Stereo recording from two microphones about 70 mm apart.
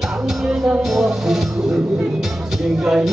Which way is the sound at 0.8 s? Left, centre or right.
Centre.